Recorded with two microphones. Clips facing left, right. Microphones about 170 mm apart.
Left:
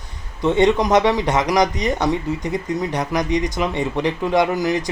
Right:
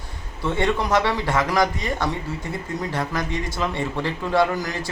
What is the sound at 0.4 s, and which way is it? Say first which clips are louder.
Speech: left 7 dB; 20° left (ahead or behind).